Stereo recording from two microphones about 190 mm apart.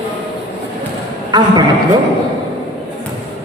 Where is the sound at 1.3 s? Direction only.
20° right (ahead or behind).